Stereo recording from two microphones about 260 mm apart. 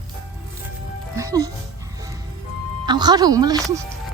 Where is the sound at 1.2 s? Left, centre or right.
Centre.